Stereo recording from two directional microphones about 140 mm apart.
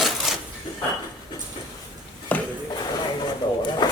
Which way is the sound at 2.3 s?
10° left (ahead or behind).